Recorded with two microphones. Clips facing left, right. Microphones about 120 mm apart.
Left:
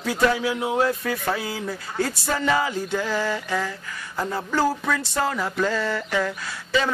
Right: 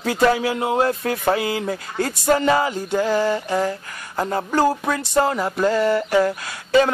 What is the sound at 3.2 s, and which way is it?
Mantra, 20° right (ahead or behind).